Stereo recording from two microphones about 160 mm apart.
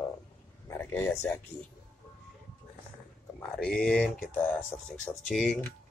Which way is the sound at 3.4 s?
5° left (ahead or behind).